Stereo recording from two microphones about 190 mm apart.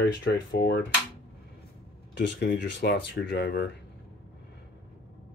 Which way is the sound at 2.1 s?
60° left (ahead or behind).